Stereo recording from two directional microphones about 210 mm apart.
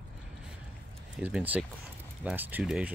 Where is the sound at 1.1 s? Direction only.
5° right (ahead or behind).